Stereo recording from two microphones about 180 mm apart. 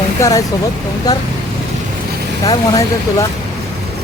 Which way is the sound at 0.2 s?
20° left (ahead or behind).